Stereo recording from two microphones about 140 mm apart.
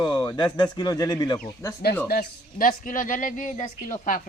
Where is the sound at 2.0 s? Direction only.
85° left.